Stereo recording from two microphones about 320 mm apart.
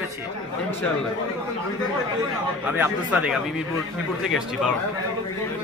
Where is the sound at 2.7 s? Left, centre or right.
Centre.